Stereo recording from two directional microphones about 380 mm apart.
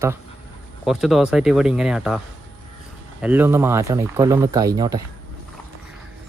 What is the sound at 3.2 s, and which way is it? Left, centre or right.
Speech, centre.